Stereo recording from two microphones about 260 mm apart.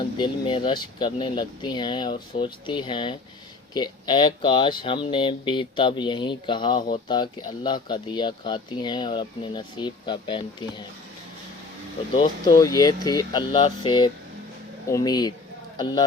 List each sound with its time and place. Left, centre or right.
0.0 s speech: centre
12.1 s speech: centre